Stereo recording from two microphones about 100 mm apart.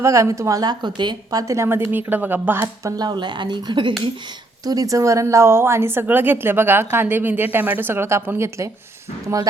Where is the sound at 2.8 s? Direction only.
30° right (ahead or behind).